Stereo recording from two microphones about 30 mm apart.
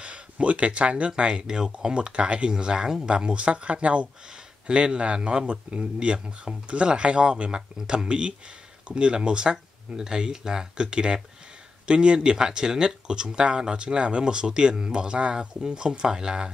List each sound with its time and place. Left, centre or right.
0.0 s speech: right
1.1 s speech: right
2.0 s speech: right
2.5 s speech: right
4.6 s speech: right
5.5 s speech: right
5.9 s speech: right